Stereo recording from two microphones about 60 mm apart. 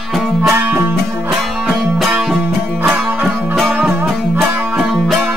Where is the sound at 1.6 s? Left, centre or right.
Centre.